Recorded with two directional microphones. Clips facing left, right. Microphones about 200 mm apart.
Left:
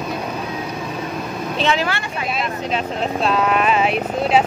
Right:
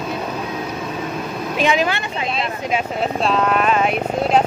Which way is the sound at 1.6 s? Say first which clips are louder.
Right 2 dB; 15° right (ahead or behind).